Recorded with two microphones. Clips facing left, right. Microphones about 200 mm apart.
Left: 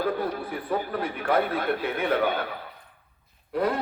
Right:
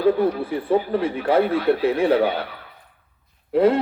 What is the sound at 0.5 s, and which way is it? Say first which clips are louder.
A man's voice: right 8 dB; 25° right (ahead or behind).